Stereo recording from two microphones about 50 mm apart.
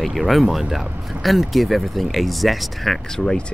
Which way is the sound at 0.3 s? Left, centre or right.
Centre.